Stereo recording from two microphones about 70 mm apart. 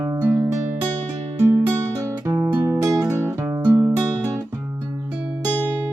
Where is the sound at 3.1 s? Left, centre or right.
Right.